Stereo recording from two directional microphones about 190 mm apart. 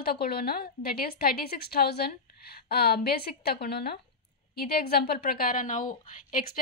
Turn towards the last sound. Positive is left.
turn(degrees=45)  # may be behind; listen again after turning